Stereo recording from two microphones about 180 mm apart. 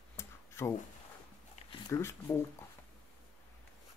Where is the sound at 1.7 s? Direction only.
15° left (ahead or behind).